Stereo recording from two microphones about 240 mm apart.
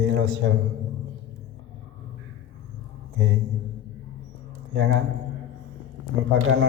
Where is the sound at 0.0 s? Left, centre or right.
Right.